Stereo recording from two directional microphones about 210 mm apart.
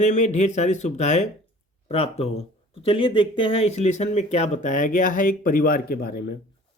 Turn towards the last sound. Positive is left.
turn(degrees=45)  # may be behind; listen again after turning